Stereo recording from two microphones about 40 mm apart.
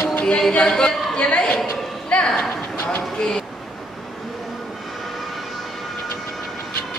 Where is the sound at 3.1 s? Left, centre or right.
Centre.